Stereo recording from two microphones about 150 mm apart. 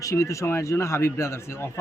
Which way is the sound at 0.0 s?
20° left (ahead or behind).